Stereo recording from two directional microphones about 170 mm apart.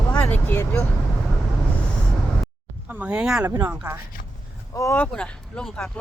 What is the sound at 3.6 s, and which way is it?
Speech, 10° right (ahead or behind).